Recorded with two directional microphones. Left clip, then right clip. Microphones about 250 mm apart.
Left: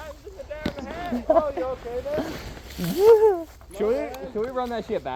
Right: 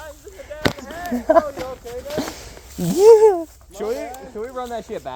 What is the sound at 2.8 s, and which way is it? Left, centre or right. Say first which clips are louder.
Speech: right 5 dB; right.